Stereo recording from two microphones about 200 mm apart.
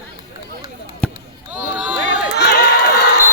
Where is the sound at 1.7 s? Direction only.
5° right (ahead or behind).